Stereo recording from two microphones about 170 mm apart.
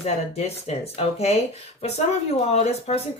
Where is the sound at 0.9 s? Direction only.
40° left (ahead or behind).